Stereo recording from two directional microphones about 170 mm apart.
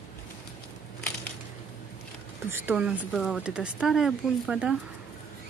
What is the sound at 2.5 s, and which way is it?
Speech, 10° right (ahead or behind).